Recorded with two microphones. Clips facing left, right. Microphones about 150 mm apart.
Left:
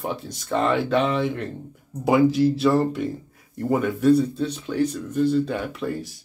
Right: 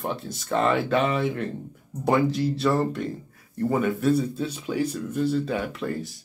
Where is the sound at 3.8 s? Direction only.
Centre (ahead or behind).